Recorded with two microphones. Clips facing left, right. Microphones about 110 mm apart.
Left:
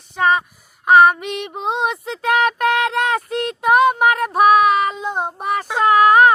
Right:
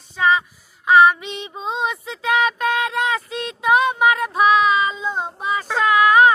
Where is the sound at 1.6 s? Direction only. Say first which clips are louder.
Left 2 dB; 65° left (ahead or behind).